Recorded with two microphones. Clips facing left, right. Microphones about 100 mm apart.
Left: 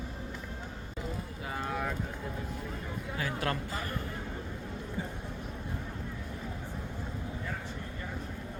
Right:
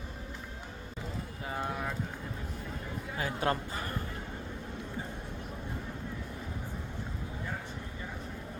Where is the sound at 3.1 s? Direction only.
25° right (ahead or behind).